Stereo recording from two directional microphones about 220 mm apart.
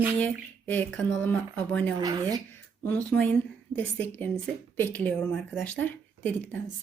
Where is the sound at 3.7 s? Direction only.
10° left (ahead or behind).